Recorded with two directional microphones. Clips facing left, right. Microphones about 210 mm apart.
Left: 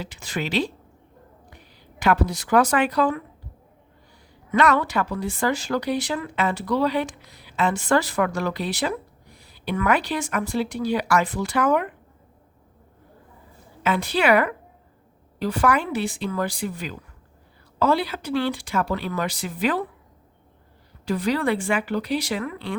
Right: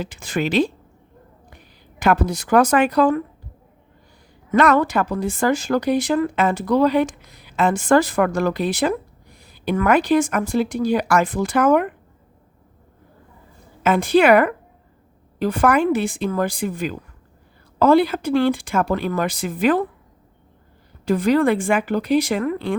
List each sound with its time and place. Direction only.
0.0 s speech: 50° right (ahead or behind)
2.0 s speech: 45° right (ahead or behind)
4.5 s speech: 45° right (ahead or behind)
13.8 s speech: 50° right (ahead or behind)
21.0 s speech: 50° right (ahead or behind)